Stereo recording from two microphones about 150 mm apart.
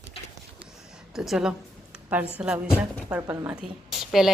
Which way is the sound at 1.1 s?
5° right (ahead or behind).